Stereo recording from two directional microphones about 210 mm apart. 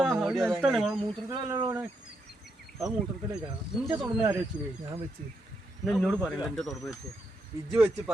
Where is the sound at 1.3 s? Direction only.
20° right (ahead or behind).